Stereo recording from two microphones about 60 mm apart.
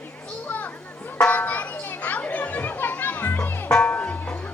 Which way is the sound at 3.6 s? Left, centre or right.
Centre.